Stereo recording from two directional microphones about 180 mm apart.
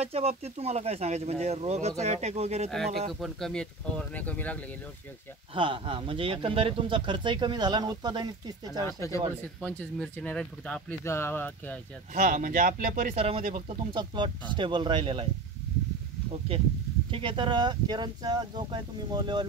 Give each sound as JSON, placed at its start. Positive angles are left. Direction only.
{"t": 0.0, "sound": "speech", "side_deg": -35}
{"t": 3.1, "sound": "speech", "side_deg": 0}
{"t": 5.5, "sound": "speech", "side_deg": -30}
{"t": 8.8, "sound": "speech", "side_deg": 15}
{"t": 12.1, "sound": "speech", "side_deg": -45}
{"t": 13.1, "sound": "speech", "side_deg": -35}
{"t": 16.3, "sound": "speech", "side_deg": -30}